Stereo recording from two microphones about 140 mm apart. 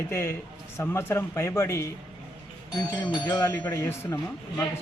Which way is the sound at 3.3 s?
20° left (ahead or behind).